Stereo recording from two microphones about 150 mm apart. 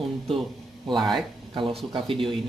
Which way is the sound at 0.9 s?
Centre (ahead or behind).